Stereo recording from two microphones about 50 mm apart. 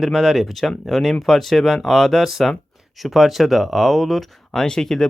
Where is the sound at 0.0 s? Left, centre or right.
Centre.